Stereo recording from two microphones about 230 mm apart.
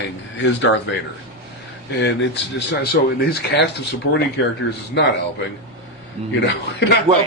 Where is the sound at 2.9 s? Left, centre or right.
Left.